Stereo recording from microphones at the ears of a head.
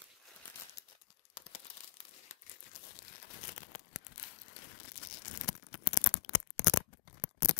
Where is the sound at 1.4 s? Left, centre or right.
Left.